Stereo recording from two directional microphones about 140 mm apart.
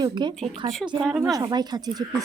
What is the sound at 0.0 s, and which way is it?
Speech, 30° right (ahead or behind).